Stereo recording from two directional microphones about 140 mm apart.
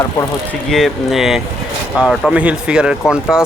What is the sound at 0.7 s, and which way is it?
Speech, centre (ahead or behind).